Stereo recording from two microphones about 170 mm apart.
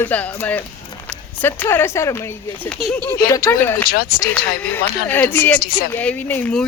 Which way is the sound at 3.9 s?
55° left (ahead or behind).